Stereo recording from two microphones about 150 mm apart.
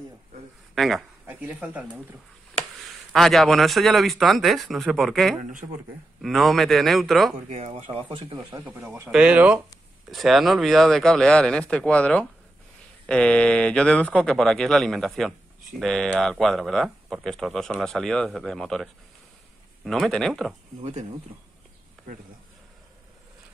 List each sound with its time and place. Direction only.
0.7 s speech: centre (ahead or behind)
1.2 s speech: 10° right (ahead or behind)
3.1 s speech: centre (ahead or behind)
7.4 s speech: 50° right (ahead or behind); by 8.6 s 30° right (ahead or behind)
8.6 s speech: 15° right (ahead or behind)